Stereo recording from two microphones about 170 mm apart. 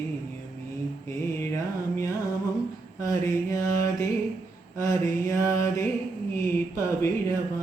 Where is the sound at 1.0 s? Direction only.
15° left (ahead or behind).